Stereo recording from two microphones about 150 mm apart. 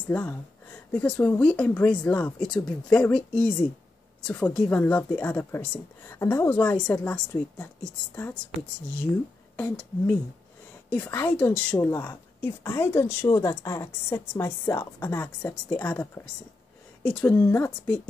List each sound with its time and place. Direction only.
0.1 s a woman's voice: 10° left (ahead or behind)
4.6 s a woman's voice: 10° left (ahead or behind)
9.6 s a woman's voice: 10° left (ahead or behind)